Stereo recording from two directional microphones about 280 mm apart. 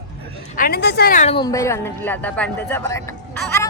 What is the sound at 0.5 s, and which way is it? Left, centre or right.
Speech, left.